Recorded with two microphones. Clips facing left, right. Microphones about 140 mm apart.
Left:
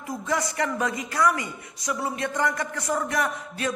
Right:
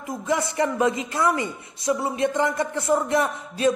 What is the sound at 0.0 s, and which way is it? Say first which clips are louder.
A man's voice: right 3 dB; 20° right (ahead or behind).